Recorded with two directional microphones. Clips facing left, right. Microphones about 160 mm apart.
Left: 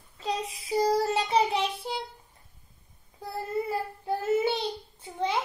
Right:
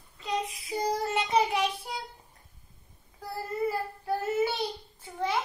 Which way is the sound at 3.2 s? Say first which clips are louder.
Even; 25° left (ahead or behind).